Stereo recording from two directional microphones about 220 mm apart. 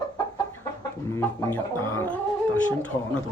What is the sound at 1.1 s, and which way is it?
Speech, 10° left (ahead or behind).